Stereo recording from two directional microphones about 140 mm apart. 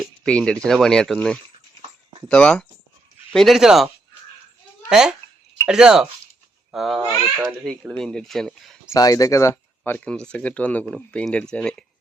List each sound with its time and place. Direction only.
0.3 s speech: 5° left (ahead or behind)
4.9 s a child's voice: 5° right (ahead or behind)
8.9 s speech: 25° left (ahead or behind); by 11.9 s 5° left (ahead or behind)